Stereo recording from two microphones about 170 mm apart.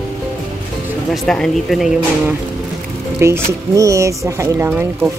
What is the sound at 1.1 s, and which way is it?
Speech, centre (ahead or behind).